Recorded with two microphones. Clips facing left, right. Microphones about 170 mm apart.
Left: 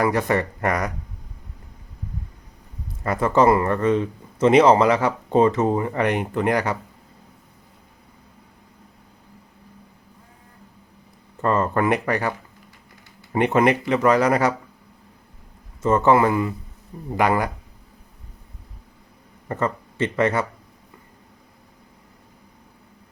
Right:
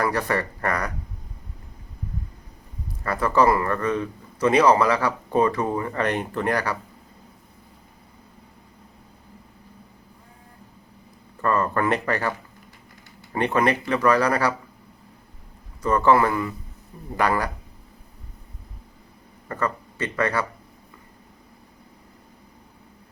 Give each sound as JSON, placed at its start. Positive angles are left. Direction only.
{"t": 0.0, "sound": "speech", "side_deg": 20}
{"t": 3.0, "sound": "speech", "side_deg": 20}
{"t": 11.3, "sound": "speech", "side_deg": 20}
{"t": 13.3, "sound": "speech", "side_deg": 20}
{"t": 15.8, "sound": "speech", "side_deg": 25}
{"t": 19.5, "sound": "speech", "side_deg": 25}